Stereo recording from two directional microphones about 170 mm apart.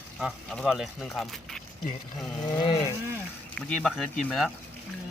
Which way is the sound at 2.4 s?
25° left (ahead or behind).